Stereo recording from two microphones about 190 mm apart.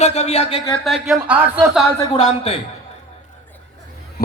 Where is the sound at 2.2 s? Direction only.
35° left (ahead or behind).